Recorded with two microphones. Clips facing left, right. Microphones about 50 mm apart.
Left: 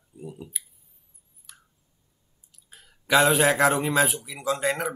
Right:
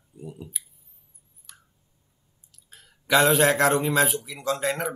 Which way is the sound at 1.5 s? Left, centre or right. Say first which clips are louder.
Even; centre.